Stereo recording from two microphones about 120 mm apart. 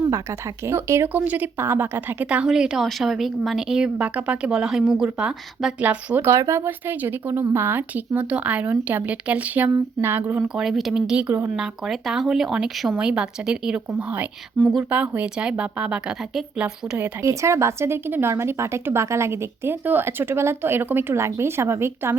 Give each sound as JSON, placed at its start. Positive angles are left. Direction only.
{"t": 0.6, "sound": "speech", "side_deg": -20}
{"t": 10.5, "sound": "speech", "side_deg": -5}
{"t": 14.6, "sound": "speech", "side_deg": 5}
{"t": 14.8, "sound": "speech", "side_deg": -10}
{"t": 17.2, "sound": "speech", "side_deg": -25}